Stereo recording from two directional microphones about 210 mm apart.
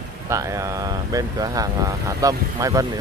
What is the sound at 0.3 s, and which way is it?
Speech, 15° right (ahead or behind).